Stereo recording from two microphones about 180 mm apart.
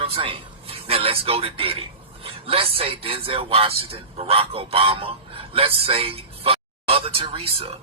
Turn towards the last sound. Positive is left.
turn(degrees=-30)  # may be behind; listen again after turning